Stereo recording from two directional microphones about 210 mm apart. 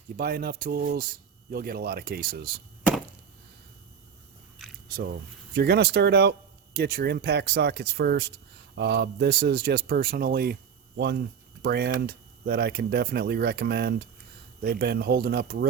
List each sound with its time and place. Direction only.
0.2 s speech: 45° right (ahead or behind)
5.5 s speech: 50° right (ahead or behind)